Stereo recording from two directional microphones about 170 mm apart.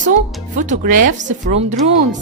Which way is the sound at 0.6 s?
50° right (ahead or behind).